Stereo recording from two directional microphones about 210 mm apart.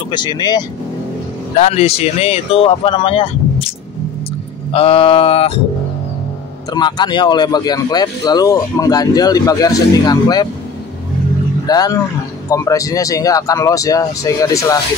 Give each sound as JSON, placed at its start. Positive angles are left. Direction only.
{"t": 0.1, "sound": "speech", "side_deg": 20}
{"t": 1.6, "sound": "speech", "side_deg": 30}
{"t": 4.7, "sound": "speech", "side_deg": 25}
{"t": 6.7, "sound": "speech", "side_deg": 20}
{"t": 11.6, "sound": "speech", "side_deg": 20}